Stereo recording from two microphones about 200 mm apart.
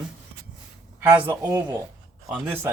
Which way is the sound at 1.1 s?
15° right (ahead or behind).